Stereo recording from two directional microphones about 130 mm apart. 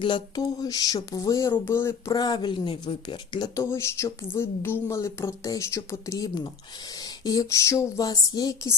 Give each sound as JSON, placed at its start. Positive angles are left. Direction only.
{"t": 0.0, "sound": "speech", "side_deg": 35}
{"t": 2.1, "sound": "speech", "side_deg": 30}
{"t": 3.6, "sound": "speech", "side_deg": 20}